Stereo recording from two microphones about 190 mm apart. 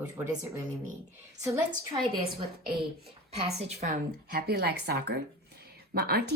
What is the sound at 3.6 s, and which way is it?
A woman's voice, 35° right (ahead or behind).